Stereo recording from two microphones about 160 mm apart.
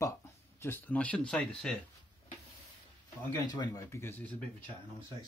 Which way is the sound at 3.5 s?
25° left (ahead or behind).